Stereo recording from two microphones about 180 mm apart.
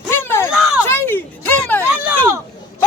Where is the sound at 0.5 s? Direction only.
5° right (ahead or behind).